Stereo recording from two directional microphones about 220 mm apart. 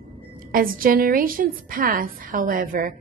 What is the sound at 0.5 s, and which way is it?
A woman's voice, 40° right (ahead or behind).